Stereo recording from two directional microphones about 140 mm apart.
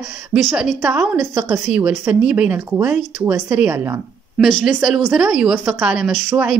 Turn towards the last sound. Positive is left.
turn(degrees=-5)  # may be behind; listen again after turning